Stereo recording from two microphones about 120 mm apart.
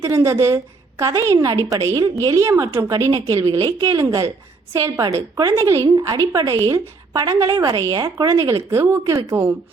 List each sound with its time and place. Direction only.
0.0 s speech: 25° right (ahead or behind)